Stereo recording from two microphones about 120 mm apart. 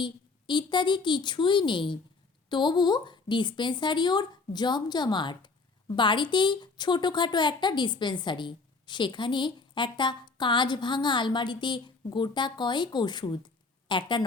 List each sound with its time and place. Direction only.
0.0 s a woman's voice: 40° left (ahead or behind)